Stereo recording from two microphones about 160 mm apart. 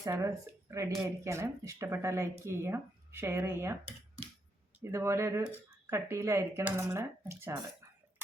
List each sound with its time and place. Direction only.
0.0 s speech: 20° right (ahead or behind)
4.8 s speech: 15° right (ahead or behind)